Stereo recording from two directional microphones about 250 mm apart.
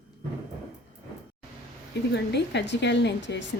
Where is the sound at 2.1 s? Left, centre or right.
Left.